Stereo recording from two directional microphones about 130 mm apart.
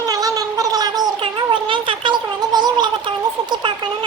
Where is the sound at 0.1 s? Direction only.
30° right (ahead or behind).